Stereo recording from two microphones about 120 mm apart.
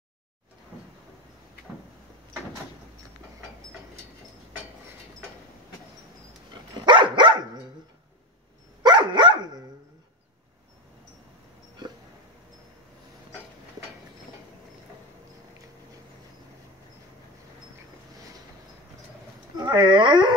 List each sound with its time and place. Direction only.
6.9 s dog: 40° right (ahead or behind)
8.8 s dog: 40° right (ahead or behind)
19.5 s dog: 35° right (ahead or behind)